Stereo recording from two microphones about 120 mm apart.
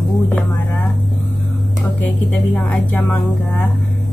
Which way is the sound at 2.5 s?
15° left (ahead or behind).